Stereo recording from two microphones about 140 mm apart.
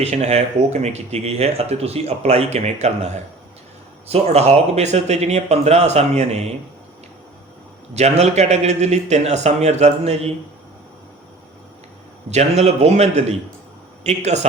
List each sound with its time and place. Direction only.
0.0 s speech: 50° right (ahead or behind)
4.1 s speech: 50° right (ahead or behind)
7.9 s speech: 50° right (ahead or behind)
12.3 s a man's voice: 50° right (ahead or behind)